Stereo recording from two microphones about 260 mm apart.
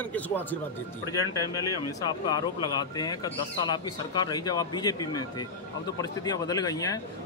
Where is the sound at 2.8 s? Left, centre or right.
Centre.